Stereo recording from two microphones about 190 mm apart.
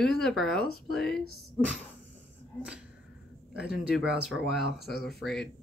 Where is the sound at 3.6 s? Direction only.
5° right (ahead or behind).